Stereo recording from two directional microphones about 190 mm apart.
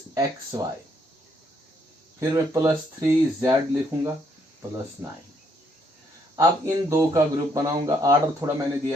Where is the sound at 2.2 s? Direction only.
15° right (ahead or behind).